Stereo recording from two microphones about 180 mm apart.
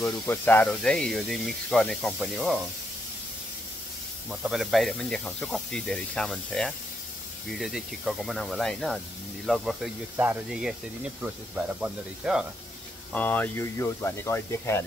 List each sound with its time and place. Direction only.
0.0 s speech: 10° left (ahead or behind)
4.3 s speech: 5° right (ahead or behind)
10.1 s speech: 10° right (ahead or behind)
13.1 s speech: 10° left (ahead or behind)